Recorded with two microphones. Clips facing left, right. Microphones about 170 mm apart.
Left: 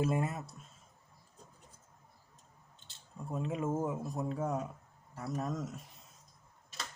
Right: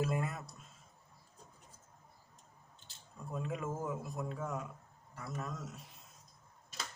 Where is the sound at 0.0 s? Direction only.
25° left (ahead or behind).